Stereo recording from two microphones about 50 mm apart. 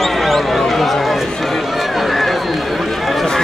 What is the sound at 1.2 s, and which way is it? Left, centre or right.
Run, centre.